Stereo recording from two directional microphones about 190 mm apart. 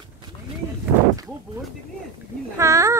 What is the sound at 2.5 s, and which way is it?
Speech, 15° right (ahead or behind).